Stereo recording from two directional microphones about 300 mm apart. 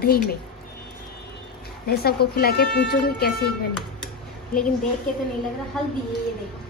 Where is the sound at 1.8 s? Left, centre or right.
Left.